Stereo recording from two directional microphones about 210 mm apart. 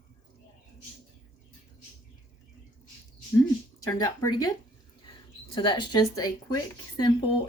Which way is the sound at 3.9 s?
15° left (ahead or behind).